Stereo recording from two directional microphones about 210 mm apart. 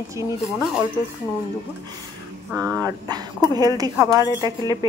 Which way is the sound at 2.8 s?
20° right (ahead or behind).